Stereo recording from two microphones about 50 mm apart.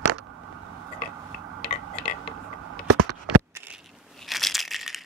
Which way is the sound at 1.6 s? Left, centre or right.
Centre.